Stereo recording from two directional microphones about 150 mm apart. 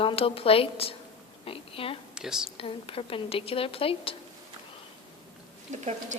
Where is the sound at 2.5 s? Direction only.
40° left (ahead or behind).